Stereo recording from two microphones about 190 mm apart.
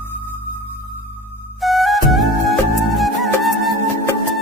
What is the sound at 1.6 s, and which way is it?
Music, centre (ahead or behind).